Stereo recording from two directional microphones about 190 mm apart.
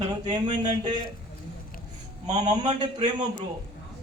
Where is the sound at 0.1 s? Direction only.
25° right (ahead or behind).